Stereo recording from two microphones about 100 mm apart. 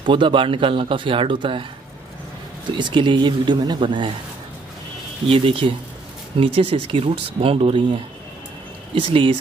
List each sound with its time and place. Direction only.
0.0 s speech: 55° right (ahead or behind)
2.7 s speech: 55° right (ahead or behind)
5.3 s speech: 65° right (ahead or behind)